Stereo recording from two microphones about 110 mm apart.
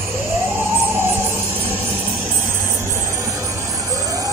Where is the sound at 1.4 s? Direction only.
55° right (ahead or behind).